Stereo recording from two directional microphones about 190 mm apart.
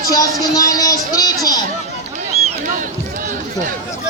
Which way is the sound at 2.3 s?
35° right (ahead or behind).